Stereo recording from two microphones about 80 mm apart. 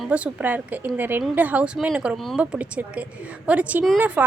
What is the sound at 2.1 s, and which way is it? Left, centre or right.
Speech, centre.